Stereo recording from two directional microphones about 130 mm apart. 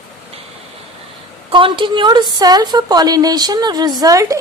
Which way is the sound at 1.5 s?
40° right (ahead or behind).